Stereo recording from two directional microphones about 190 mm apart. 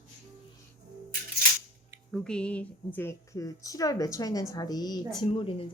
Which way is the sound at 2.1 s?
5° left (ahead or behind).